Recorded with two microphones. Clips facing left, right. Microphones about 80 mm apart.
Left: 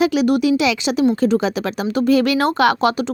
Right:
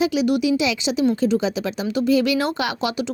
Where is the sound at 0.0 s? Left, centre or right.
Left.